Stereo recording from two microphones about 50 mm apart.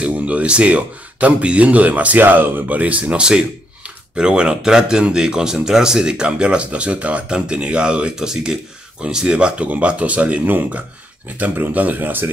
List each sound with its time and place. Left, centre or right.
0.0 s speech: right